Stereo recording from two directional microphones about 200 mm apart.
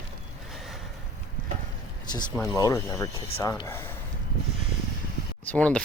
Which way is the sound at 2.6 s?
15° left (ahead or behind).